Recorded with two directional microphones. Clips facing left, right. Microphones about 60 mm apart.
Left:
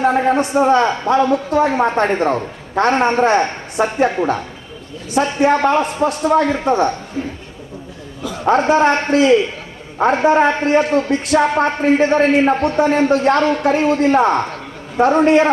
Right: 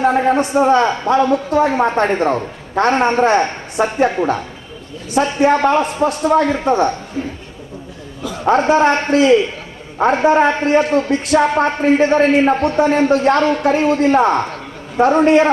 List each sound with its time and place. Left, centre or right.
0.0 s a man's voice: centre
5.1 s a man's voice: left; by 6.9 s centre
8.4 s a man's voice: centre
9.1 s a man's voice: left
10.0 s a man's voice: centre